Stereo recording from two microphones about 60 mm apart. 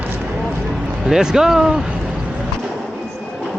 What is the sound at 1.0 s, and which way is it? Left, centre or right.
Speech, centre.